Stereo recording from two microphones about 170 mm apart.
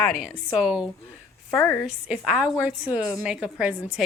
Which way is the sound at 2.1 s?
5° right (ahead or behind).